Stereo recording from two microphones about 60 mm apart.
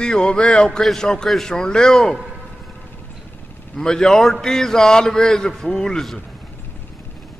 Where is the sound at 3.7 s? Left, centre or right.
Centre.